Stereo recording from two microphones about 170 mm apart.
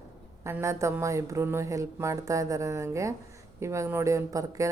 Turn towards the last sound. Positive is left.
turn(degrees=-20)  # may be behind; listen again after turning